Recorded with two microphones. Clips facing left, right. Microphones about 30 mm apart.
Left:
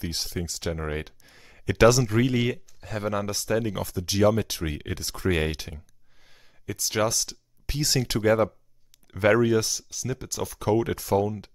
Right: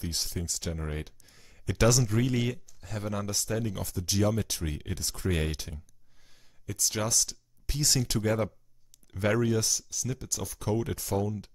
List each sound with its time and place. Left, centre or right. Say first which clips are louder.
0.0 s speech: left 3 dB; left